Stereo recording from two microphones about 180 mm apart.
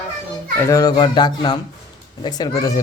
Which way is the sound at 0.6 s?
20° left (ahead or behind).